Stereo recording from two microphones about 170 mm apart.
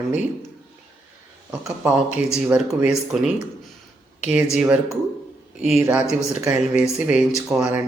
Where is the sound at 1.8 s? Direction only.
5° right (ahead or behind).